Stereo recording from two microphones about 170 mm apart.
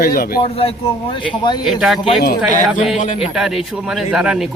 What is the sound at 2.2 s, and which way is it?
Speech, 60° left (ahead or behind).